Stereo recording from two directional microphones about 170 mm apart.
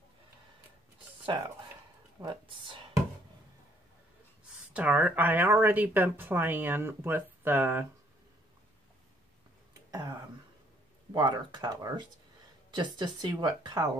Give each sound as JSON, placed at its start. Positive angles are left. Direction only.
{"t": 2.2, "sound": "speech", "side_deg": -30}
{"t": 4.7, "sound": "speech", "side_deg": -10}
{"t": 9.8, "sound": "speech", "side_deg": -20}